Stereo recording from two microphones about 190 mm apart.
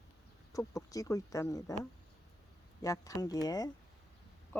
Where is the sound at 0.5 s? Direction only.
20° left (ahead or behind).